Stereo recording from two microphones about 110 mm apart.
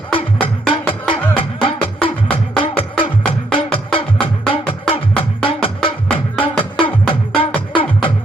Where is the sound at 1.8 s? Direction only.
15° left (ahead or behind).